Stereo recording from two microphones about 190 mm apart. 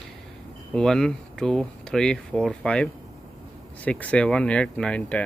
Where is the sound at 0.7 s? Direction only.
5° left (ahead or behind).